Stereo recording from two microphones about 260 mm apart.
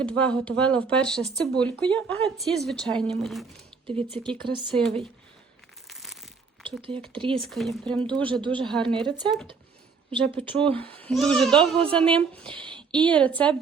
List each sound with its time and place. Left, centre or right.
0.0 s speech: centre
3.8 s speech: centre
4.7 s speech: centre
5.9 s crumpling: centre
7.2 s speech: centre
7.5 s speech: centre
8.2 s speech: centre
10.6 s speech: centre
12.5 s a sound: centre
13.0 s speech: centre